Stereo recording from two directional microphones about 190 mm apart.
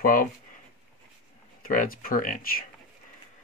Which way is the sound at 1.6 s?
45° left (ahead or behind).